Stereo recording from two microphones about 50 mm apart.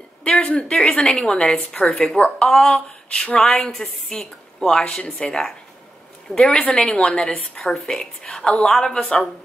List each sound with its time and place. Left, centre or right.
0.2 s speech: left
2.1 s a woman's voice: centre
2.5 s a sound: centre
3.3 s a woman's voice: centre